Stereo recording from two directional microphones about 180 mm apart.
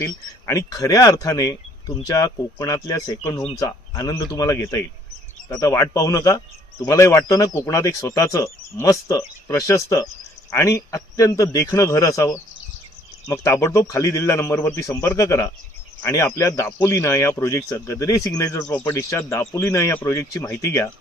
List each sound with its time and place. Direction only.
0.0 s speech: 15° left (ahead or behind)